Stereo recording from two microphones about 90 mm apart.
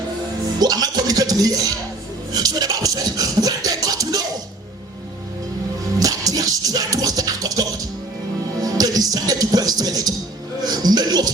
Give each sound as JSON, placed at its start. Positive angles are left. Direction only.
{"t": 0.6, "sound": "music", "side_deg": -45}
{"t": 6.0, "sound": "music", "side_deg": -40}